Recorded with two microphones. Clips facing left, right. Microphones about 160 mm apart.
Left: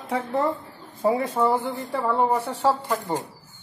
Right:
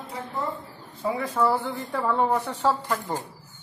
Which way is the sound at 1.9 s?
10° left (ahead or behind).